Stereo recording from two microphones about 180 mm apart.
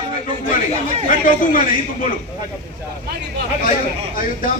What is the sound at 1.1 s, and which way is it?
A man's voice, 50° left (ahead or behind).